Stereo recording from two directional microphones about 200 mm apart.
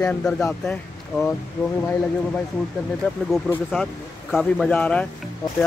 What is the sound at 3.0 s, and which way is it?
Speech, 10° left (ahead or behind).